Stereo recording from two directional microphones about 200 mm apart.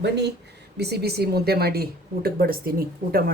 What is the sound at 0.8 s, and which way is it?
Speech, 55° right (ahead or behind).